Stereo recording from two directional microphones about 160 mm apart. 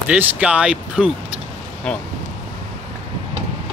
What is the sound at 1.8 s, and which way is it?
Speech, 5° left (ahead or behind).